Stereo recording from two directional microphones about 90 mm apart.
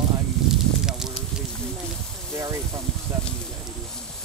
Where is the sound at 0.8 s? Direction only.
5° right (ahead or behind).